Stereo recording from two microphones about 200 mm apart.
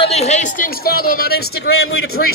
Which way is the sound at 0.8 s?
50° left (ahead or behind).